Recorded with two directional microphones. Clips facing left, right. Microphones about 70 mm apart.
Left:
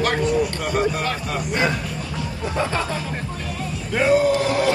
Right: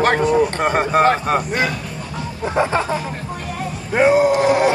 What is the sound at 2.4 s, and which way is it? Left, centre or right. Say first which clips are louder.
Chicken: right 6 dB; right.